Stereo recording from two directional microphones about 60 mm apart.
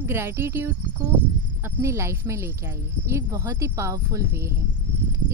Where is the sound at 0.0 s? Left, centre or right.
Right.